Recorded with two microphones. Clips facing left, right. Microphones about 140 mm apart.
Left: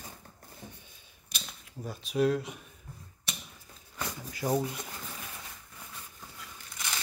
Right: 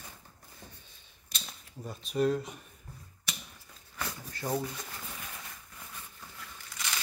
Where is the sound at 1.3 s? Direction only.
5° left (ahead or behind).